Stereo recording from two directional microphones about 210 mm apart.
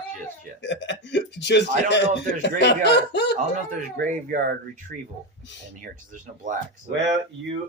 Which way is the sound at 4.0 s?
40° right (ahead or behind).